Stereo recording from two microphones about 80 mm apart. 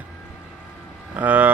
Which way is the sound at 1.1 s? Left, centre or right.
Right.